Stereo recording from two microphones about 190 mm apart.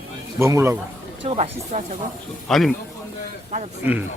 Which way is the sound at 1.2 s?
35° right (ahead or behind).